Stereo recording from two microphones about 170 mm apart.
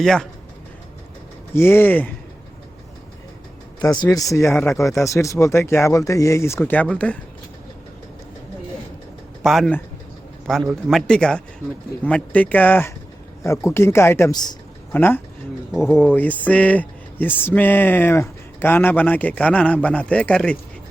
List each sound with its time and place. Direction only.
0.0 s speech: 5° left (ahead or behind)
1.5 s speech: 15° left (ahead or behind)
4.0 s speech: 20° left (ahead or behind)
4.5 s speech: 5° left (ahead or behind)
4.8 s speech: 20° left (ahead or behind)
9.4 s speech: centre (ahead or behind); by 14.5 s 25° left (ahead or behind)
14.9 s speech: 10° left (ahead or behind)
15.7 s speech: 5° right (ahead or behind)
16.0 s speech: 10° left (ahead or behind)